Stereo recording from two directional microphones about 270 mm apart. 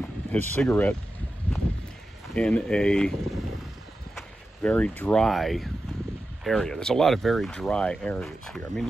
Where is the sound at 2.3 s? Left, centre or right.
Centre.